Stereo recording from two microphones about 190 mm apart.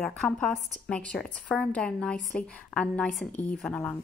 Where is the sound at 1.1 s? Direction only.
5° left (ahead or behind).